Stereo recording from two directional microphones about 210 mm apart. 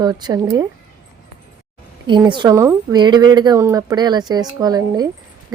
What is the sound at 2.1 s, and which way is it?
A woman's voice, 20° right (ahead or behind).